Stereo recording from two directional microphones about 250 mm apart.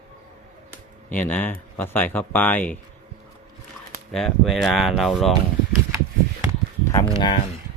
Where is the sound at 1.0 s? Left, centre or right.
Centre.